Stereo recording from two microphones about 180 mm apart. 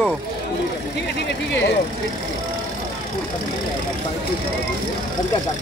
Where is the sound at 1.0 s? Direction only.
75° left (ahead or behind).